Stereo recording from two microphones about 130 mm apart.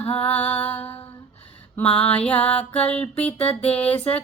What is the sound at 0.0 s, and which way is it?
Music, 50° left (ahead or behind).